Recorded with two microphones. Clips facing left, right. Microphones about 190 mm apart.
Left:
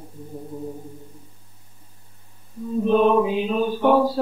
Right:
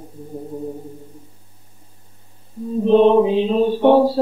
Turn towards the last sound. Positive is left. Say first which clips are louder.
# right 5 dB
turn(degrees=-30)  # may be behind; listen again after turning